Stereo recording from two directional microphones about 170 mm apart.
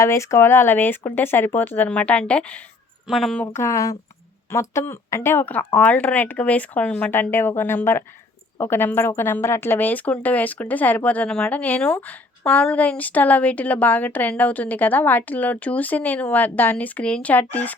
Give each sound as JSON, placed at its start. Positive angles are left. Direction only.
{"t": 0.0, "sound": "a woman's voice", "side_deg": 15}
{"t": 3.4, "sound": "speech", "side_deg": 15}